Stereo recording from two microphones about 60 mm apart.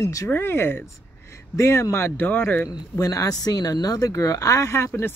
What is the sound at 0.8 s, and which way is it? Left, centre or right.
Speech, left.